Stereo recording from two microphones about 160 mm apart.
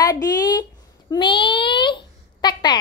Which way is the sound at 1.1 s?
30° left (ahead or behind).